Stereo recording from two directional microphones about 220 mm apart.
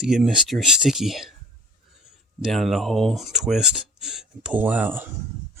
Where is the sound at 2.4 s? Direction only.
Centre (ahead or behind).